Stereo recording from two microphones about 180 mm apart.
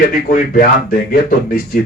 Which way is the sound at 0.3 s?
50° left (ahead or behind).